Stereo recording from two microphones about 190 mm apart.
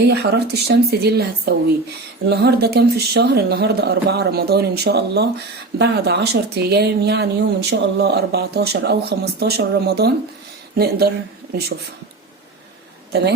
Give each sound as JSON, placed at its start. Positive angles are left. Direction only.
{"t": 0.0, "sound": "speech", "side_deg": -60}